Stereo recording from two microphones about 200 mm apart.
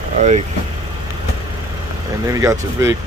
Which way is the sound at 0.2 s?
35° right (ahead or behind).